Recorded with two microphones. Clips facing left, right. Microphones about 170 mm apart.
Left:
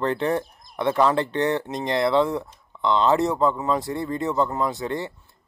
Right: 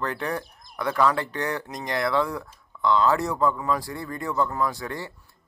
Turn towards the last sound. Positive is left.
turn(degrees=20)  # may be behind; listen again after turning